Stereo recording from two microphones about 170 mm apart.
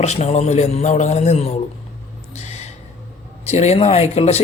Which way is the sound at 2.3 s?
40° left (ahead or behind).